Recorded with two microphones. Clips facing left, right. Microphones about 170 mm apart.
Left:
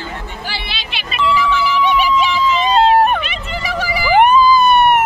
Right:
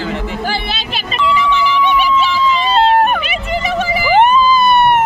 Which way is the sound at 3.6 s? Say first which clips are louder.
Right 1 dB; 20° right (ahead or behind).